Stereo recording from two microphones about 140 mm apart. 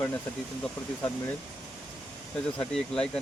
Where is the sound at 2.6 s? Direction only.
5° left (ahead or behind).